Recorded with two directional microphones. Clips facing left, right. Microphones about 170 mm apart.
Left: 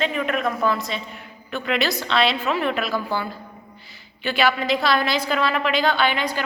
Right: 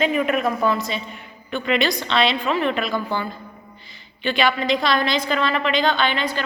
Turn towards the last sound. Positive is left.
turn(degrees=10)  # may be behind; listen again after turning